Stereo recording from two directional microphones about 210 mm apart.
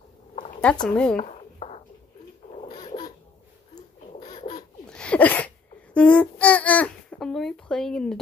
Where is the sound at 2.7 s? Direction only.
20° left (ahead or behind).